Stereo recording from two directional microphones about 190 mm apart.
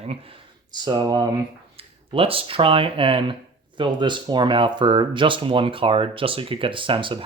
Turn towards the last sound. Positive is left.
turn(degrees=-25)  # may be behind; listen again after turning